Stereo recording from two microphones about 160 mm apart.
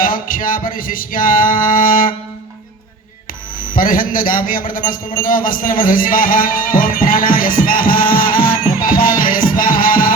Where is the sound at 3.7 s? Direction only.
60° left (ahead or behind).